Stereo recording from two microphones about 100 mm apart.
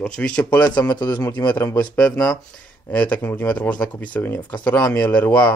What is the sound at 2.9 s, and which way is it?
Speech, 15° left (ahead or behind).